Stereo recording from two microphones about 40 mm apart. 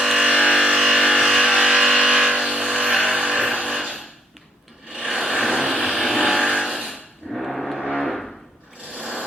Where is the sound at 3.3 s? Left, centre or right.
Centre.